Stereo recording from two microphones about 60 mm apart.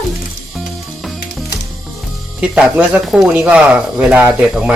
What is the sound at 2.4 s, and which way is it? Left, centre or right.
Speech, right.